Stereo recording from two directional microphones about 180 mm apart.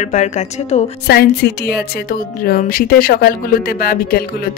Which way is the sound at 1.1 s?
60° left (ahead or behind).